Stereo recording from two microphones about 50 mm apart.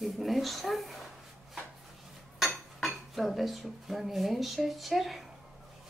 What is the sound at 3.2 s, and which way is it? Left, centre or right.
Speech, centre.